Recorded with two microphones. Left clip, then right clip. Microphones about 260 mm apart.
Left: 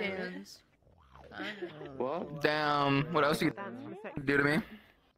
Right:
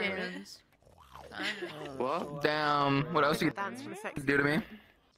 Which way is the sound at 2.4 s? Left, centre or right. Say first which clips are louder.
Even; centre.